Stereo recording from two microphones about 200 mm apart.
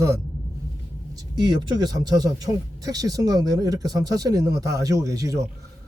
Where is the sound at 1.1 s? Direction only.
20° right (ahead or behind).